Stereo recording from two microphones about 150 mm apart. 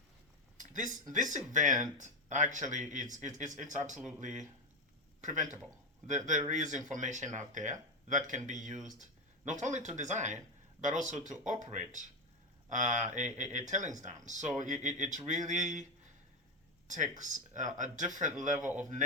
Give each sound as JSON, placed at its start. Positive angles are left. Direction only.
{"t": 0.5, "sound": "a sound", "side_deg": -60}
{"t": 1.0, "sound": "speech", "side_deg": -55}
{"t": 16.9, "sound": "speech", "side_deg": -55}